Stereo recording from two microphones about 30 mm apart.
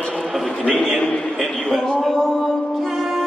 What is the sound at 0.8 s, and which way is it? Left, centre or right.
Speech, centre.